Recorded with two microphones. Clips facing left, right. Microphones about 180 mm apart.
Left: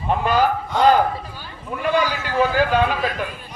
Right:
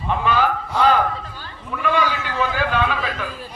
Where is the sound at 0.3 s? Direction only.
40° left (ahead or behind).